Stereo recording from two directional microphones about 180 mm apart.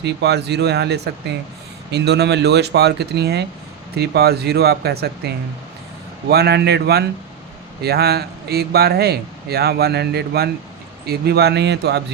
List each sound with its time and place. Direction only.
0.0 s a man's voice: 70° right (ahead or behind)